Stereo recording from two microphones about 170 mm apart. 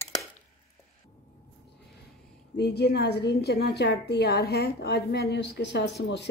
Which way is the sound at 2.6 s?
75° left (ahead or behind).